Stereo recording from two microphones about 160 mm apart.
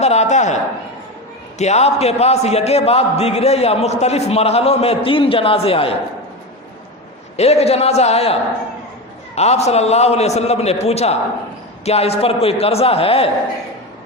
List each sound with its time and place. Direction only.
0.0 s a man's voice: 45° left (ahead or behind)
7.3 s a man's voice: 40° left (ahead or behind)